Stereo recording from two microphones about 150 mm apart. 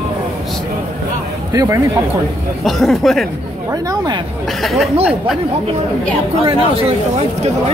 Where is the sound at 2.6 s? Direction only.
Centre (ahead or behind).